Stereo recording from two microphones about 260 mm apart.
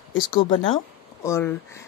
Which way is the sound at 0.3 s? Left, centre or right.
Centre.